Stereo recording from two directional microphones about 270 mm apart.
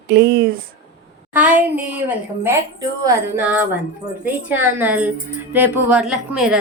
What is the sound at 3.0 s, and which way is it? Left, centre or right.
A woman's voice, centre.